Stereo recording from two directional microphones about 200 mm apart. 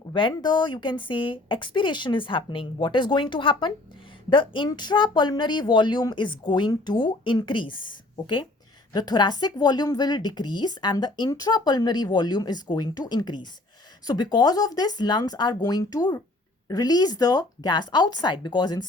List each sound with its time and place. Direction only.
0.1 s a woman's voice: 25° left (ahead or behind)